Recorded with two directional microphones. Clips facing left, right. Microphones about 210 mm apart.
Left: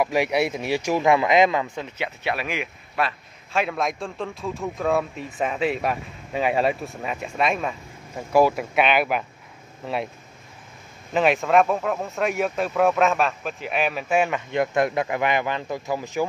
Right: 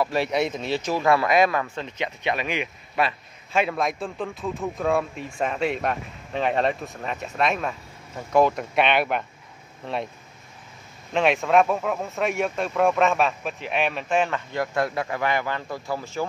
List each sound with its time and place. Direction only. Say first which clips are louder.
0.0 s a man's voice: left 2 dB; 15° left (ahead or behind)
11.1 s a man's voice: left 1 dB; centre (ahead or behind)
14.5 s speech: left 4 dB; 20° left (ahead or behind)